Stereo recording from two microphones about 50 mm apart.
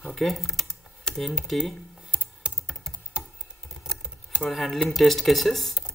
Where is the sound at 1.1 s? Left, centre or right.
Centre.